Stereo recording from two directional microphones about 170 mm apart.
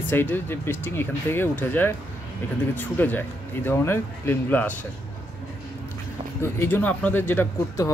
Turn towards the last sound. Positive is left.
turn(degrees=10)  # may be behind; listen again after turning